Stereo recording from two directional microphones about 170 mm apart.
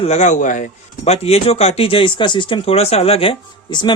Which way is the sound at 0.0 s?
40° left (ahead or behind).